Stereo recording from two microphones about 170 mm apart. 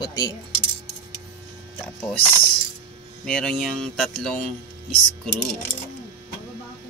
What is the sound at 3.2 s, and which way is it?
Speech, 5° left (ahead or behind).